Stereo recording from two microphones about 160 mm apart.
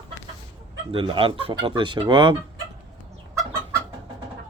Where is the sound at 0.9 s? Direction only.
35° right (ahead or behind).